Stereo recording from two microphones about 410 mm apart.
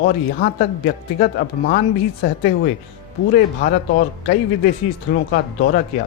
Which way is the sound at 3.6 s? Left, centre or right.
Left.